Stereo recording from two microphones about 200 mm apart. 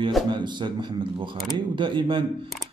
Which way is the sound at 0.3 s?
25° right (ahead or behind).